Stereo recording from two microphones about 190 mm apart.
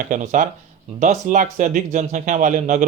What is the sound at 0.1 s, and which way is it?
Speech, 40° right (ahead or behind).